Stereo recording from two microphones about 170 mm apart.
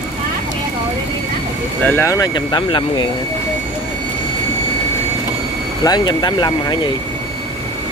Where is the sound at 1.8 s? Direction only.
15° left (ahead or behind).